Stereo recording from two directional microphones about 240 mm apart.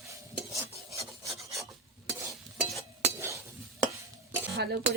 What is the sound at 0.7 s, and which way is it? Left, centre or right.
Filing, centre.